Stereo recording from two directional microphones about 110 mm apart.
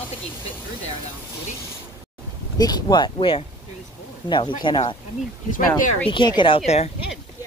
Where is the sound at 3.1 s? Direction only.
55° left (ahead or behind).